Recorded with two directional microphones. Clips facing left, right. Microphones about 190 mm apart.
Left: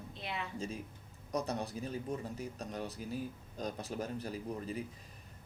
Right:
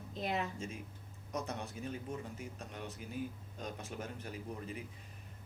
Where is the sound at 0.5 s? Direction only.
35° left (ahead or behind).